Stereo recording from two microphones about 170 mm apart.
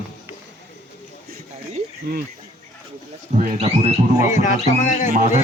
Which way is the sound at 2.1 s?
65° right (ahead or behind).